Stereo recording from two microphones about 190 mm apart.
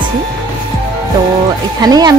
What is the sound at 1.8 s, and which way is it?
Speech, 20° right (ahead or behind).